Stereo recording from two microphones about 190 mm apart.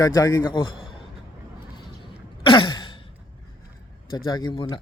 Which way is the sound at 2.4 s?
25° left (ahead or behind).